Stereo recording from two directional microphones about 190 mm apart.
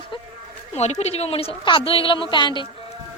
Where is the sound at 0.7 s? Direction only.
35° left (ahead or behind).